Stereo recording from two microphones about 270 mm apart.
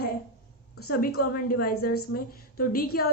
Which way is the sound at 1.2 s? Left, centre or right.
Left.